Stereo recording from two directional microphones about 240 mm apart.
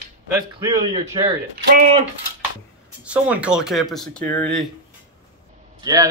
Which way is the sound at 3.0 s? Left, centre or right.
Centre.